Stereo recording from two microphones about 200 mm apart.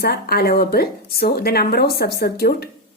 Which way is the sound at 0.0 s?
50° left (ahead or behind).